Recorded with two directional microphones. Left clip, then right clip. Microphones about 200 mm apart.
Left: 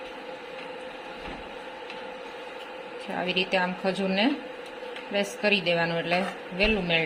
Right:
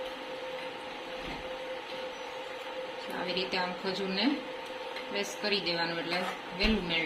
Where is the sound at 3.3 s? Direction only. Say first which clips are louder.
Left 7 dB; 45° left (ahead or behind).